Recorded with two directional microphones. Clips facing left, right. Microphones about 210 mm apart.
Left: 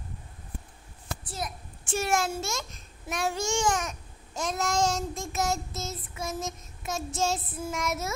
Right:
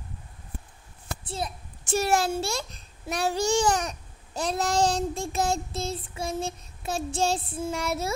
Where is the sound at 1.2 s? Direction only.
30° right (ahead or behind).